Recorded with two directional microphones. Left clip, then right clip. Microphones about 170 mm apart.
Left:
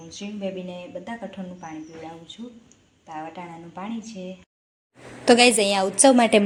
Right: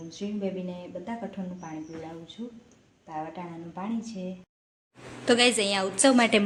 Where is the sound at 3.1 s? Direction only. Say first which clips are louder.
Left 1 dB; centre (ahead or behind).